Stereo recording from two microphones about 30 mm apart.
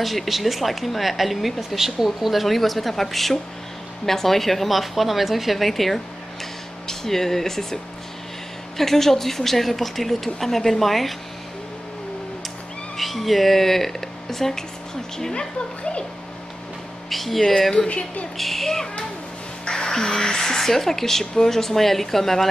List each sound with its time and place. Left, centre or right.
0.0 s a woman's voice: centre
12.9 s speech: centre
15.3 s speech: left
17.1 s speech: centre
17.5 s a woman's voice: centre
17.7 s a woman's voice: left
18.4 s a woman's voice: centre